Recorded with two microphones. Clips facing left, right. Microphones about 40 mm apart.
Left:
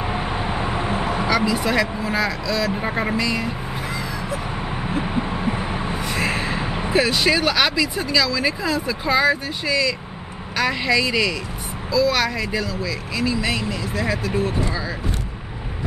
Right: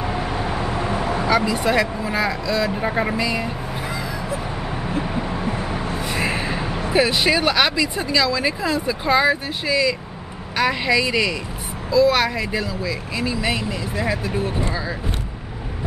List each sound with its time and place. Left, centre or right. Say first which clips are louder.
0.0 s vehicle: even; centre
1.3 s speech: right 2 dB; centre
2.7 s speech: right 1 dB; centre
3.2 s speech: even; centre
3.4 s music: even; centre
4.8 s a sound: left 1 dB; centre
6.0 s a sound: even; centre
6.5 s a sound: even; centre
6.9 s speech: right 1 dB; centre